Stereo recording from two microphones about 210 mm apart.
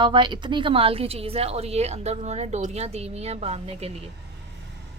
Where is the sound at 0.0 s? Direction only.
20° right (ahead or behind).